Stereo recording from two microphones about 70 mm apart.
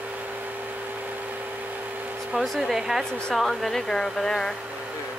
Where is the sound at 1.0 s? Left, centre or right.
Right.